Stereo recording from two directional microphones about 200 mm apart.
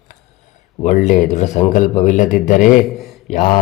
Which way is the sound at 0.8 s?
40° left (ahead or behind).